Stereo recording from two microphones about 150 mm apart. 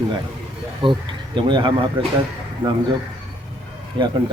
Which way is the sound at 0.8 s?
35° right (ahead or behind).